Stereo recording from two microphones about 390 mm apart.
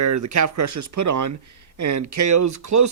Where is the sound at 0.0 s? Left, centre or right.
Right.